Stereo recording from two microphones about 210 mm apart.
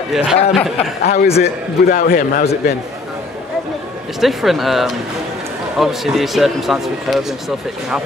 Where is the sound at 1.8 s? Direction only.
40° left (ahead or behind).